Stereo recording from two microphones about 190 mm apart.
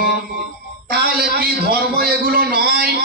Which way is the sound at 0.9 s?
55° right (ahead or behind).